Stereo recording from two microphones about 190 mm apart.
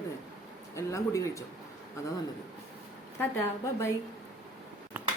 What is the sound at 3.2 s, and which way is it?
Speech, 15° left (ahead or behind).